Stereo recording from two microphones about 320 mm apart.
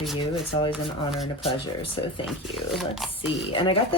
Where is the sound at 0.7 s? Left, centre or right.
Centre.